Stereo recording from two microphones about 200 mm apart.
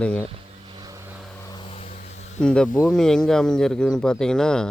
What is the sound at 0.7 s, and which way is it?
Vehicle, 20° right (ahead or behind).